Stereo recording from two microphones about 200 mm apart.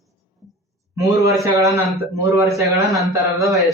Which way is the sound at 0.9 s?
15° right (ahead or behind).